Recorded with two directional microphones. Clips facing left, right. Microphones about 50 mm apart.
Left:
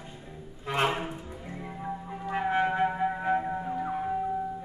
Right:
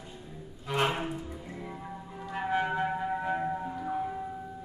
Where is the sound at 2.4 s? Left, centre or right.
Left.